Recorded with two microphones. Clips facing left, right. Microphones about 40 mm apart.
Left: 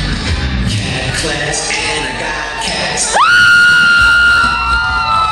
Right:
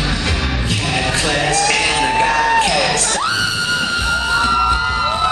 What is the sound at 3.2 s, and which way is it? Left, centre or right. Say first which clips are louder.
Music: left 12 dB; left.